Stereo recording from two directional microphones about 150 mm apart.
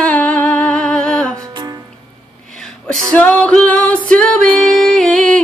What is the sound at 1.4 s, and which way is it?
Music, 25° right (ahead or behind).